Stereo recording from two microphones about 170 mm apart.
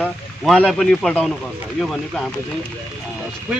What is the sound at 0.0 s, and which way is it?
A man's voice, 5° left (ahead or behind).